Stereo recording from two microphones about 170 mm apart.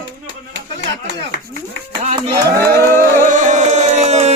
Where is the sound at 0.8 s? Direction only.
90° right.